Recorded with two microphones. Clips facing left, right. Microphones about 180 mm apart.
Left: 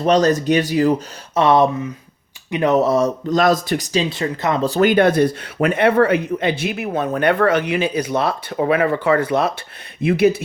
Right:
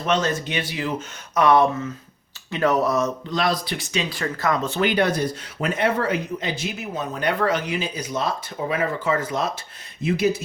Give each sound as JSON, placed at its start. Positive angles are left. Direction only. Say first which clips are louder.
{"t": 0.0, "sound": "speech", "louder": "left 8 dB", "side_deg": 35}
{"t": 1.4, "sound": "speech", "louder": "left 3 dB", "side_deg": 25}
{"t": 3.2, "sound": "speech", "louder": "left 8 dB", "side_deg": 45}
{"t": 4.1, "sound": "speech", "louder": "left 3 dB", "side_deg": 20}
{"t": 4.6, "sound": "speech", "louder": "left 10 dB", "side_deg": 40}